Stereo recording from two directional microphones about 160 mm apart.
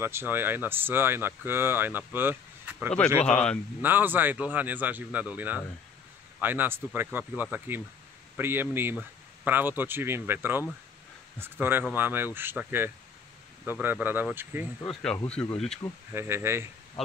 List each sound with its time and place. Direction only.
0.0 s speech: 15° right (ahead or behind)
3.3 s speech: 5° left (ahead or behind)
3.8 s speech: 10° right (ahead or behind)
14.9 s speech: 5° left (ahead or behind)
16.1 s speech: 15° right (ahead or behind)